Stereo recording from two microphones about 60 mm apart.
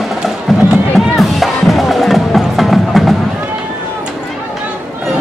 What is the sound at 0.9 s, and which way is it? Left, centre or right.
Music, centre.